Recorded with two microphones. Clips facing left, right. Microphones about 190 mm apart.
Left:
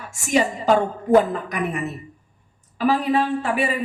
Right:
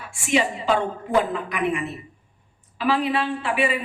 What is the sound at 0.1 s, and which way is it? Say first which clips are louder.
A woman's voice: left 2 dB; 40° left (ahead or behind).